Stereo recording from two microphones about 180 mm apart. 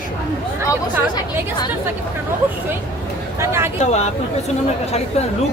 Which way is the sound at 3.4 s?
15° right (ahead or behind).